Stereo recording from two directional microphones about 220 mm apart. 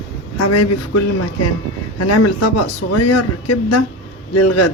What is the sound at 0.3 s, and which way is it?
Speech, 90° left.